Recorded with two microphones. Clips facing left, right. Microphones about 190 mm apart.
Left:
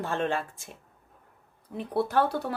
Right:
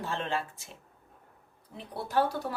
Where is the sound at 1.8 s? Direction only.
55° left (ahead or behind).